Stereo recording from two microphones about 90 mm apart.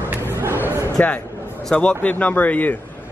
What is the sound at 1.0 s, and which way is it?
A man's voice, 15° left (ahead or behind).